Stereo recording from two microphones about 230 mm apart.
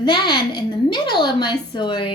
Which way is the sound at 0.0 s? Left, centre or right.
Centre.